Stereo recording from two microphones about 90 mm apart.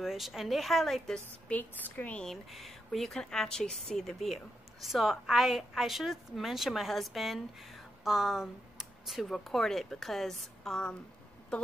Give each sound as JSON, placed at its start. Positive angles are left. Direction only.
{"t": 0.0, "sound": "a woman's voice", "side_deg": 0}
{"t": 1.6, "sound": "a woman's voice", "side_deg": 20}
{"t": 2.2, "sound": "a woman's voice", "side_deg": 0}